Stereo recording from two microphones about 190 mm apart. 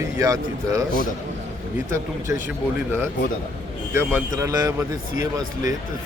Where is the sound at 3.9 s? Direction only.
15° right (ahead or behind).